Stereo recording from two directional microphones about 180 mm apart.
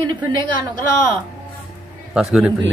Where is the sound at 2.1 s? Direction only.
5° right (ahead or behind).